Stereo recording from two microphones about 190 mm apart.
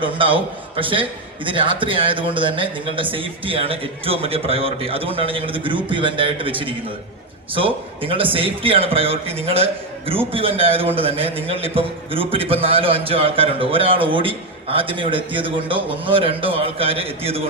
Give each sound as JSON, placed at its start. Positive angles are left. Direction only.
{"t": 0.0, "sound": "a man's voice", "side_deg": -25}